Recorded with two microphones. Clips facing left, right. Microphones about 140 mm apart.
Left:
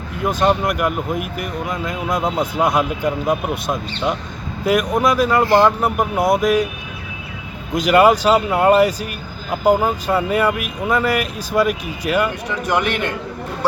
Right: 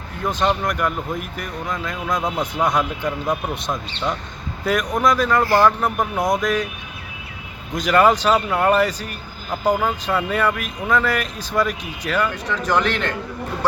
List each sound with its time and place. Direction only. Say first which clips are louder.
0.3 s speech: left 3 dB; 10° left (ahead or behind)
5.5 s speech: left 2 dB; 20° left (ahead or behind)
5.8 s speech: left 3 dB; 5° left (ahead or behind)
7.8 s speech: left 3 dB; 10° left (ahead or behind)
10.2 s speech: left 3 dB; 10° left (ahead or behind)